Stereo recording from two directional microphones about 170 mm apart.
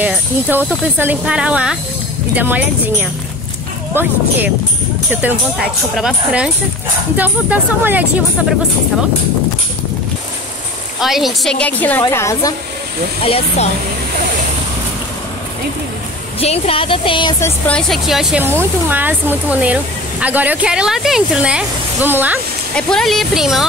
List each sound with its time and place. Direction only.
0.0 s speech: 10° right (ahead or behind)
11.0 s a woman's voice: centre (ahead or behind); by 12.5 s 15° left (ahead or behind)
13.2 s speech: 35° left (ahead or behind)
16.3 s speech: 35° left (ahead or behind)
17.4 s speech: 10° left (ahead or behind); by 22.4 s 10° right (ahead or behind)
22.8 s speech: 5° left (ahead or behind)